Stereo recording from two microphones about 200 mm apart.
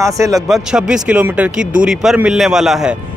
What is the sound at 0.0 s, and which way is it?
Speech, 15° right (ahead or behind).